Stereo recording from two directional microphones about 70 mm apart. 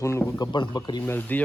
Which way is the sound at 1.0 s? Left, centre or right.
Left.